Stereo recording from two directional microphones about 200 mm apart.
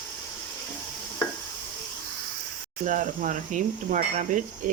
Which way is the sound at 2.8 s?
40° right (ahead or behind).